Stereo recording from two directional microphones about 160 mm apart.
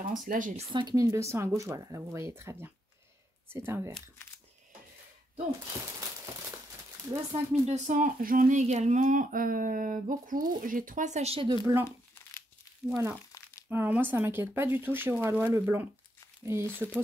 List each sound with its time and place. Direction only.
0.3 s speech: 55° right (ahead or behind)
0.7 s speech: 25° right (ahead or behind)
7.5 s speech: 45° right (ahead or behind)
11.6 s speech: 15° right (ahead or behind)